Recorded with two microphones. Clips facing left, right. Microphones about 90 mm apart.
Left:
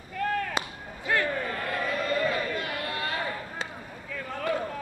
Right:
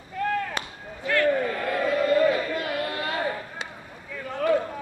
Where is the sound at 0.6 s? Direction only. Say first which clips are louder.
Left 1 dB; 20° left (ahead or behind).